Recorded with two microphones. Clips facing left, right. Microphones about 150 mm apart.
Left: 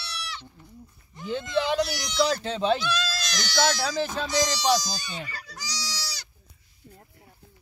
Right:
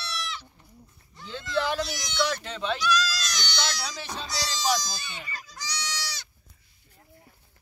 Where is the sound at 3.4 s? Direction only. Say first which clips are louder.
Left 11 dB; 45° left (ahead or behind).